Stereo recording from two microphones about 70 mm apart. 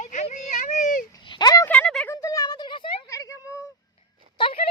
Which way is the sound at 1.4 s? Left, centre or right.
Left.